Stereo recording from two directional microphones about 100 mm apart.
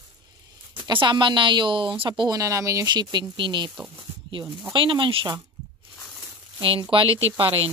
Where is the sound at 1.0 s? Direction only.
50° right (ahead or behind); by 2.9 s 35° right (ahead or behind).